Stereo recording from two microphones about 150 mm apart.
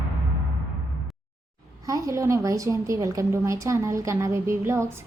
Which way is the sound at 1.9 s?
20° right (ahead or behind).